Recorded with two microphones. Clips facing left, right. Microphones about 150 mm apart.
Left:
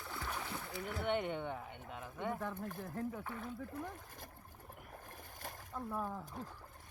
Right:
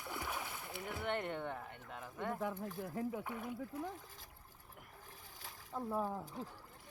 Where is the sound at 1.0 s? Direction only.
Centre (ahead or behind).